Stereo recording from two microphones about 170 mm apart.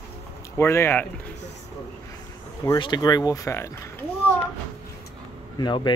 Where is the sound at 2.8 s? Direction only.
25° left (ahead or behind).